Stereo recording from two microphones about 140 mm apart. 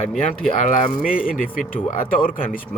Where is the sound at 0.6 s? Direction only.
75° left (ahead or behind).